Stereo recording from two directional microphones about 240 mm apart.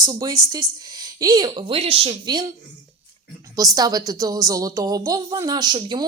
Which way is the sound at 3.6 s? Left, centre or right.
Centre.